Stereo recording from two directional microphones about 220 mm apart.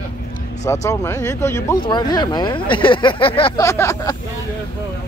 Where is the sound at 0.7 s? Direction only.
15° left (ahead or behind).